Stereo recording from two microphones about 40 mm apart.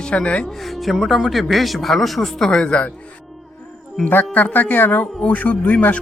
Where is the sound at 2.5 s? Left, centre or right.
Left.